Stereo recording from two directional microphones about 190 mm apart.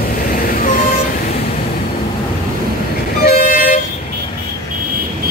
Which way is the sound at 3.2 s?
50° left (ahead or behind).